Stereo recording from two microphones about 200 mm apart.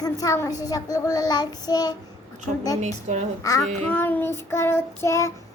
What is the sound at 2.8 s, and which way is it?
Speech, 35° right (ahead or behind).